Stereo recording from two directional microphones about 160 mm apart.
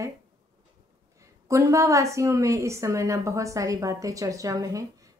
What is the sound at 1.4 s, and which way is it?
A woman's voice, 20° right (ahead or behind).